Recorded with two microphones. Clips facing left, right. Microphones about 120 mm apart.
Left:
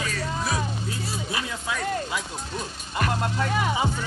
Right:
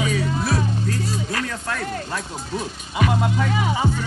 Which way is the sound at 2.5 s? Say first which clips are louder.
Right 5 dB; 5° right (ahead or behind).